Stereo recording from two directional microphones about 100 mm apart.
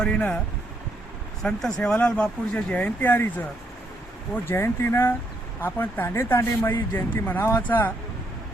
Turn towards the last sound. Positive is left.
turn(degrees=20)  # may be behind; listen again after turning